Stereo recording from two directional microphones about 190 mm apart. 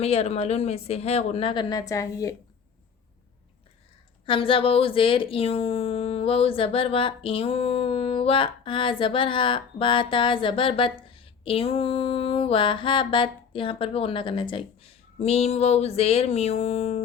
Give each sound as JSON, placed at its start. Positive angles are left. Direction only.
{"t": 0.0, "sound": "speech", "side_deg": 35}
{"t": 4.3, "sound": "speech", "side_deg": 30}